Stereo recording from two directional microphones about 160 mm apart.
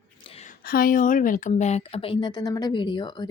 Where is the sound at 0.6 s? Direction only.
65° left (ahead or behind).